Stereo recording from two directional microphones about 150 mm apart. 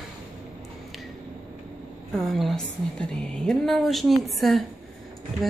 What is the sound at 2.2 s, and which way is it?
A woman's voice, centre (ahead or behind).